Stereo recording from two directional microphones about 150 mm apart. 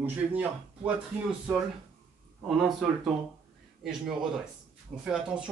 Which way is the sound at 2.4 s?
Centre (ahead or behind).